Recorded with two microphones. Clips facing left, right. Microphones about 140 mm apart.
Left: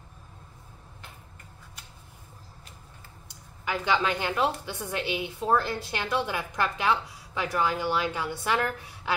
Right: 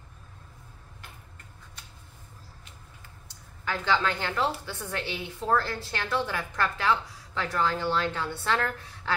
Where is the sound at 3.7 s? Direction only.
15° left (ahead or behind).